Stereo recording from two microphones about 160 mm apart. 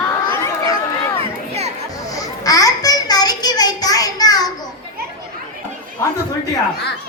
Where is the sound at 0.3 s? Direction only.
20° left (ahead or behind).